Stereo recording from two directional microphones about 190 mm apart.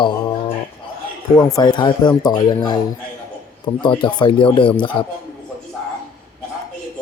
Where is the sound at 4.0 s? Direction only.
25° left (ahead or behind).